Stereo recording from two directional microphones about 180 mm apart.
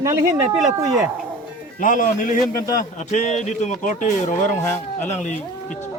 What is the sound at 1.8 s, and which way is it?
A man's voice, 45° left (ahead or behind).